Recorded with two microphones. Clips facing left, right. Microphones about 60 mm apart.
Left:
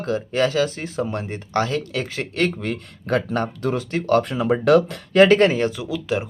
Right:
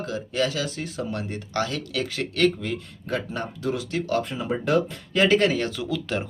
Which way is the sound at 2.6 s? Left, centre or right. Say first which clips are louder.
Left 3 dB; left.